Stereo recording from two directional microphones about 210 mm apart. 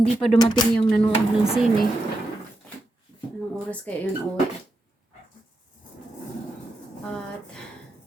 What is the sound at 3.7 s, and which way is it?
Speech, 5° left (ahead or behind).